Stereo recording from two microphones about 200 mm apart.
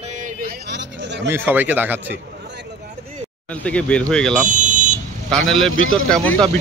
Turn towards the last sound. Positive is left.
turn(degrees=5)  # may be behind; listen again after turning